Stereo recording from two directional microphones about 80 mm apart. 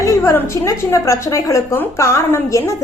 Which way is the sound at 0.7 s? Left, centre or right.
Left.